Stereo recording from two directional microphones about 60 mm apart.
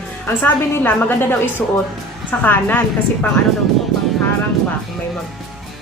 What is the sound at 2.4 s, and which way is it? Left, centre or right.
Speech, left.